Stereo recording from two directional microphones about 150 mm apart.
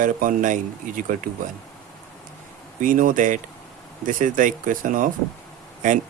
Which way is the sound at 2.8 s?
65° right (ahead or behind).